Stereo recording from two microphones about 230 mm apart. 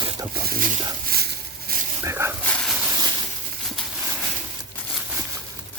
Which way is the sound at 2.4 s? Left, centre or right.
Centre.